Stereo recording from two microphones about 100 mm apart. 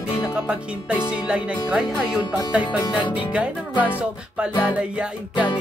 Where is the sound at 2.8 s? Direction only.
55° left (ahead or behind).